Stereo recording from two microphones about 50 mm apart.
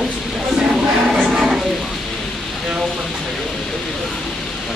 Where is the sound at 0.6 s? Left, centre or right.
Centre.